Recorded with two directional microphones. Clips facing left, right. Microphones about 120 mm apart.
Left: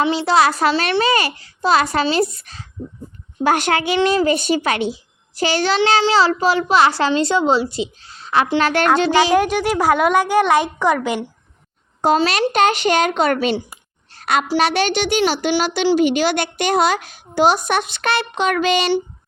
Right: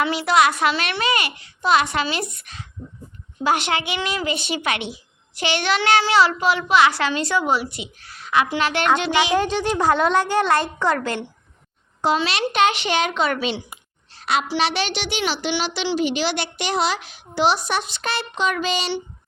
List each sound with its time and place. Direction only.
0.0 s a woman's voice: 30° left (ahead or behind)
3.4 s a woman's voice: 45° left (ahead or behind)
9.3 s a woman's voice: 10° left (ahead or behind)
12.0 s a woman's voice: 45° left (ahead or behind)
14.1 s a sound: 50° left (ahead or behind)
14.4 s a woman's voice: 45° left (ahead or behind)